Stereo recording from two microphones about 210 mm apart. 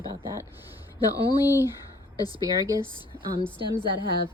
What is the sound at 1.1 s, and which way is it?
A woman's voice, 20° left (ahead or behind).